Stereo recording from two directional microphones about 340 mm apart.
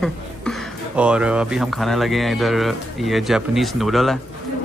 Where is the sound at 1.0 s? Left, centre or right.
Centre.